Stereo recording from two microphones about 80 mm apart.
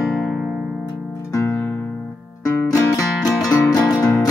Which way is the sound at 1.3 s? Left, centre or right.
Left.